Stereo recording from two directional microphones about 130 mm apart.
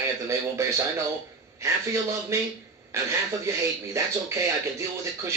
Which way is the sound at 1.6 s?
25° right (ahead or behind).